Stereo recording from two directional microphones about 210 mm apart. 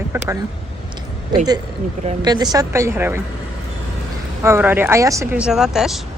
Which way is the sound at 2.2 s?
20° right (ahead or behind).